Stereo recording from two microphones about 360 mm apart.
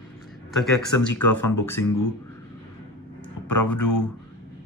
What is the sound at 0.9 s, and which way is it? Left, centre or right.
Speech, left.